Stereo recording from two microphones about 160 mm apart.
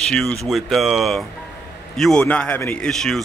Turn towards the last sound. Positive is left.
turn(degrees=5)  # may be behind; listen again after turning